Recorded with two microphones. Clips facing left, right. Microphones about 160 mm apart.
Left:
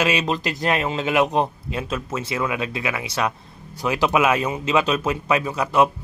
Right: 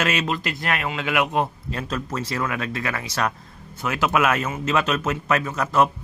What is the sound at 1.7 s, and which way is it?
Speech, 10° left (ahead or behind).